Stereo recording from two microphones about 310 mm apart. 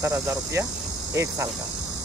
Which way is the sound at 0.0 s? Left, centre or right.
Centre.